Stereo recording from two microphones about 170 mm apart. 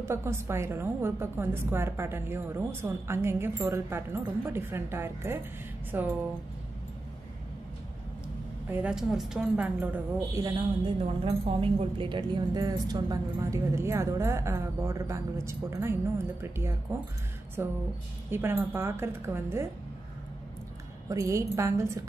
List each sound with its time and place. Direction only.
0.0 s a woman's voice: 15° right (ahead or behind)
8.6 s a woman's voice: 10° right (ahead or behind)
10.3 s a woman's voice: 20° right (ahead or behind)
11.1 s a woman's voice: 40° right (ahead or behind); by 19.7 s 15° right (ahead or behind)
21.1 s a woman's voice: 20° right (ahead or behind)